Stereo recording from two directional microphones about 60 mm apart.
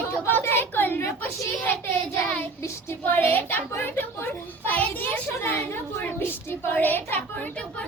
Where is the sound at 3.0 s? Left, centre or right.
Left.